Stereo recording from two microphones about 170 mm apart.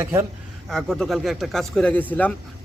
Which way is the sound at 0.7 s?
5° left (ahead or behind).